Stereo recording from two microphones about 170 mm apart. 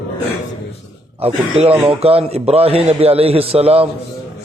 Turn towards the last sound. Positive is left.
turn(degrees=-35)  # may be behind; listen again after turning